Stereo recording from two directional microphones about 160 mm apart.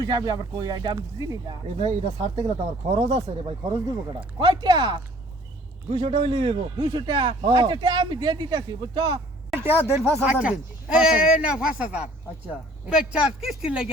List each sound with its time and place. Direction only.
0.0 s speech: 25° right (ahead or behind)
1.8 s a man's voice: 40° right (ahead or behind)
9.6 s speech: 15° right (ahead or behind)